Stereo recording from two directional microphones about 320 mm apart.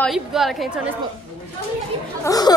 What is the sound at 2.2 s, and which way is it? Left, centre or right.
Speech, centre.